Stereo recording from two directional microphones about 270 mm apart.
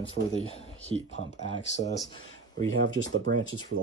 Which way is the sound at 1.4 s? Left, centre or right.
Left.